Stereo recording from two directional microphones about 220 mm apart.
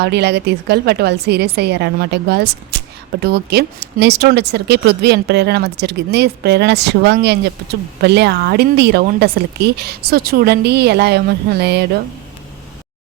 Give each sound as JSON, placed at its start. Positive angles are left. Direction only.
{"t": 0.0, "sound": "speech", "side_deg": -50}